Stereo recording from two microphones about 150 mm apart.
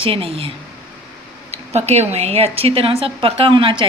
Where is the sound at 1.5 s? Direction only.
45° right (ahead or behind).